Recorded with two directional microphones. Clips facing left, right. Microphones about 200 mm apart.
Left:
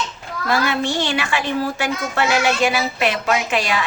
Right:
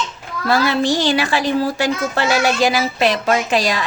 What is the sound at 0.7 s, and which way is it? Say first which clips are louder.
Speech: right 4 dB; 35° right (ahead or behind).